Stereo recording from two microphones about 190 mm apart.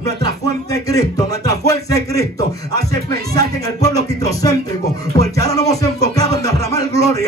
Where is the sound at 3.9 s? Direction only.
20° left (ahead or behind).